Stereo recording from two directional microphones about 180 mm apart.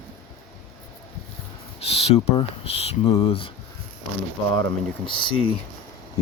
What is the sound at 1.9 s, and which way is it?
Speech, 35° left (ahead or behind).